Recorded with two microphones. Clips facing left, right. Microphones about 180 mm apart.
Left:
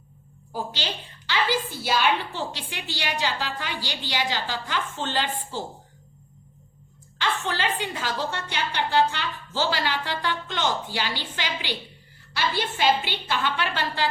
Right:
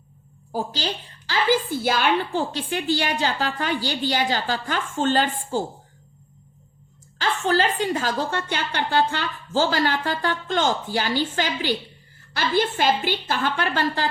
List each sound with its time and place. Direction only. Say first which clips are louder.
0.5 s a woman's voice: right 4 dB; 40° right (ahead or behind)
7.2 s a woman's voice: right 6 dB; 40° right (ahead or behind)